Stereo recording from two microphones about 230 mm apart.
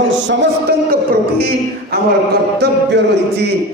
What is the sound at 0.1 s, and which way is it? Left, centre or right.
Speech, right.